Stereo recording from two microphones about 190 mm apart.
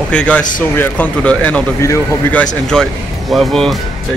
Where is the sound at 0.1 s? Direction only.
5° left (ahead or behind).